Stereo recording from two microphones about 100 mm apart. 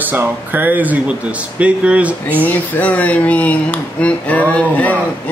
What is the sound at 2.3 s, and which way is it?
Speech, 15° left (ahead or behind).